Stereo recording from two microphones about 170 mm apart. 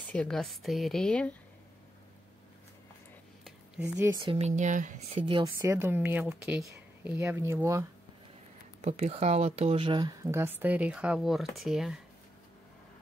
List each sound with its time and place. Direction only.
0.1 s speech: 5° left (ahead or behind)
3.9 s speech: 15° right (ahead or behind)
4.2 s speech: 35° right (ahead or behind)
5.1 s speech: 25° right (ahead or behind)
8.8 s speech: 40° right (ahead or behind); by 12.0 s centre (ahead or behind)